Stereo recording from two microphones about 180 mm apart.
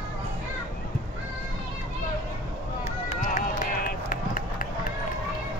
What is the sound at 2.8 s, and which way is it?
Run, 40° left (ahead or behind).